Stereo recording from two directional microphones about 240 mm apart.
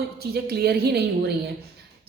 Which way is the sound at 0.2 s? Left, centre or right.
Right.